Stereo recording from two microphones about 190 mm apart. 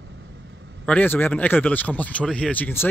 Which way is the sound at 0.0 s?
70° right (ahead or behind).